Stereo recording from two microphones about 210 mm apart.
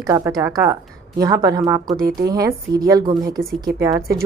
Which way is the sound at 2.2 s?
15° right (ahead or behind).